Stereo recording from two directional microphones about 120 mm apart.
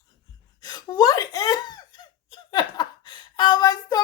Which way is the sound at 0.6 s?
35° left (ahead or behind).